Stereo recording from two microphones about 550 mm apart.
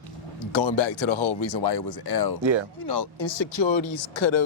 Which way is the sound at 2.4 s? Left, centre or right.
Right.